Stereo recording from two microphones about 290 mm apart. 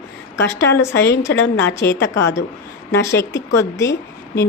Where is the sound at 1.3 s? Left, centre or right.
Left.